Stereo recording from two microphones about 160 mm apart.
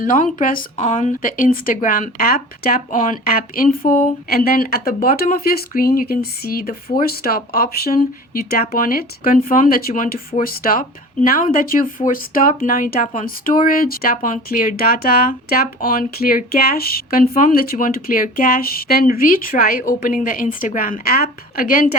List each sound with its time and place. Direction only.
0.0 s speech: 55° left (ahead or behind)